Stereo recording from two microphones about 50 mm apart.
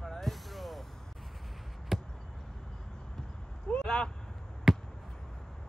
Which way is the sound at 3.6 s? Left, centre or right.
Centre.